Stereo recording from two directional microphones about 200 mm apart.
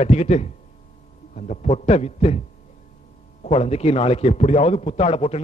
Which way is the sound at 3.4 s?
35° left (ahead or behind).